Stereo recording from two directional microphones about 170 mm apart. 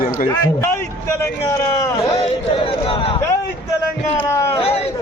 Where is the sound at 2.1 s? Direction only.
35° left (ahead or behind).